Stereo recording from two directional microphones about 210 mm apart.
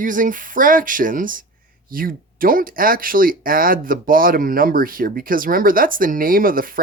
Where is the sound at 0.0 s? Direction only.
40° right (ahead or behind).